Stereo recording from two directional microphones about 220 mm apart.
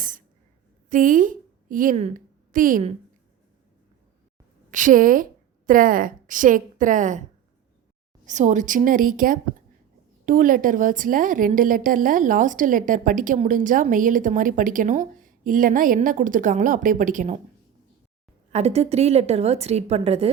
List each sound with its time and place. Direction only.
0.9 s a woman's voice: 35° right (ahead or behind)
4.7 s a woman's voice: 35° right (ahead or behind)
8.2 s a woman's voice: 35° right (ahead or behind)
18.5 s a woman's voice: 30° right (ahead or behind)